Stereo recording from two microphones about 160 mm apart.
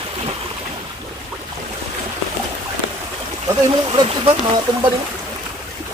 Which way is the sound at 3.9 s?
35° right (ahead or behind).